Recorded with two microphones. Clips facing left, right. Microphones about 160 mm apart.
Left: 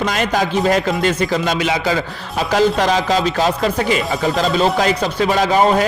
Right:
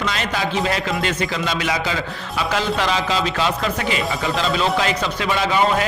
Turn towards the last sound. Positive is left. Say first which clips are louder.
# left 5 dB
turn(degrees=40)  # may be behind; listen again after turning